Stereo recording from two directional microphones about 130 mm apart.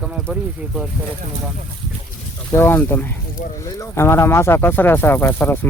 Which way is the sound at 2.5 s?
15° left (ahead or behind).